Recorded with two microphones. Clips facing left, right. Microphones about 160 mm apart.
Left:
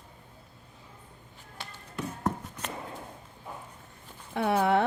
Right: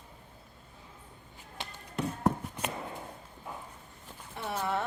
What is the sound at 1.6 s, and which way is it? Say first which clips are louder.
Tap: right 2 dB; 20° right (ahead or behind).